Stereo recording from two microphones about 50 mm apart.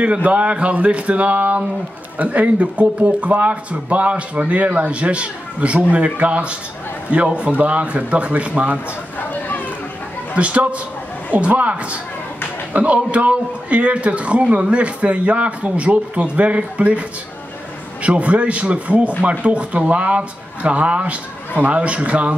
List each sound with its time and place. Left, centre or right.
0.0 s speech: right
10.3 s speech: right
18.0 s speech: right